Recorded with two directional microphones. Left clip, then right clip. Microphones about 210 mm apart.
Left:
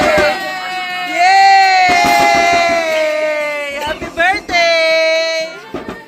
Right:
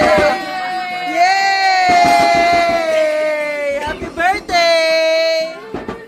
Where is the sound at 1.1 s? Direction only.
Centre (ahead or behind).